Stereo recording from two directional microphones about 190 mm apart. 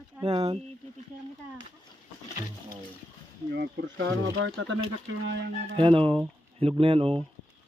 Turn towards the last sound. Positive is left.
turn(degrees=-30)  # may be behind; listen again after turning